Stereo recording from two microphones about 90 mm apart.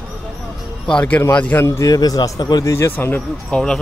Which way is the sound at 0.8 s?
10° left (ahead or behind).